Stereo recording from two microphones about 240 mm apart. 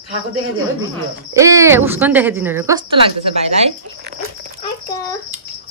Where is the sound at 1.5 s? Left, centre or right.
Centre.